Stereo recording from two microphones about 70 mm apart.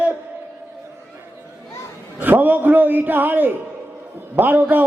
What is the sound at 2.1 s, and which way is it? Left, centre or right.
A man's voice, right.